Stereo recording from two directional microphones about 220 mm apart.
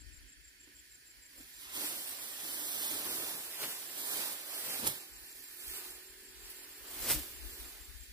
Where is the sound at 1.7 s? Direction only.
15° right (ahead or behind).